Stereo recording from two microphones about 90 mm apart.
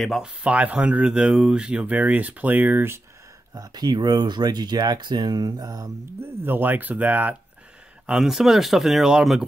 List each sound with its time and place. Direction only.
0.0 s speech: centre (ahead or behind)
0.4 s speech: 15° right (ahead or behind)
3.5 s speech: 45° right (ahead or behind)
6.4 s speech: 20° right (ahead or behind)
8.1 s speech: 5° right (ahead or behind)